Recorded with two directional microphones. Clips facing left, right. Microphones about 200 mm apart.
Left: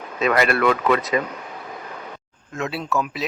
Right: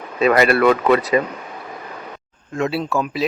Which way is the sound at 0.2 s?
35° right (ahead or behind).